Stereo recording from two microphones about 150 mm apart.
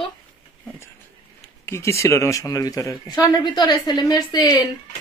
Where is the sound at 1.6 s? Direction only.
20° left (ahead or behind).